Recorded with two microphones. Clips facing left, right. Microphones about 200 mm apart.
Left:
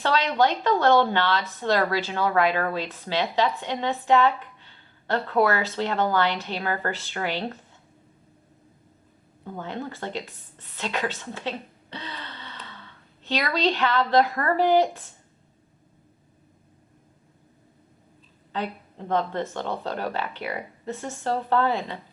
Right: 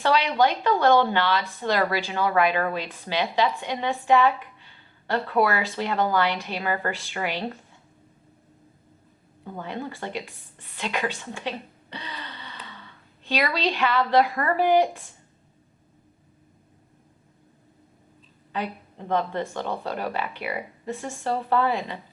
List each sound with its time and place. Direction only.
0.0 s speech: 15° right (ahead or behind)
9.4 s speech: 10° right (ahead or behind)
18.5 s speech: 15° right (ahead or behind)